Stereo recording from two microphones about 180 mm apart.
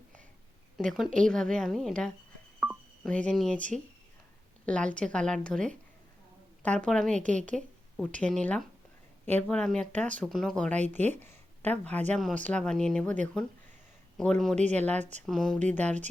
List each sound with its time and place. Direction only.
0.8 s speech: centre (ahead or behind)
2.6 s telephone dialing: 5° right (ahead or behind)
3.1 s speech: 5° left (ahead or behind)
11.0 s speech: 40° right (ahead or behind)
11.3 s a sound: 10° left (ahead or behind)
12.1 s speech: 5° left (ahead or behind)
14.2 s speech: 5° left (ahead or behind)
14.5 s speech: 40° right (ahead or behind)
15.3 s speech: centre (ahead or behind)